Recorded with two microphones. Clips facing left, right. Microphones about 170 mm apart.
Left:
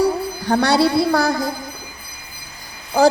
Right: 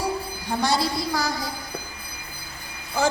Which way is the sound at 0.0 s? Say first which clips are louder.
Left 9 dB; 70° left (ahead or behind).